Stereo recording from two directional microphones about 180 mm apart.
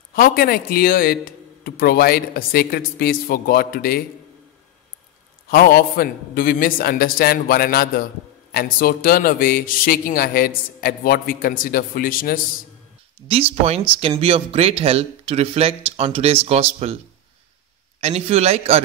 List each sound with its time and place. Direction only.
0.1 s a man's voice: 55° left (ahead or behind)
5.5 s a man's voice: 55° left (ahead or behind)
14.2 s speech: 30° right (ahead or behind)
18.0 s speech: 35° right (ahead or behind)